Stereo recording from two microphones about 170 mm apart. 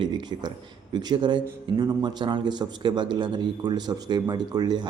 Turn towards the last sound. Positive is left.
turn(degrees=-25)  # may be behind; listen again after turning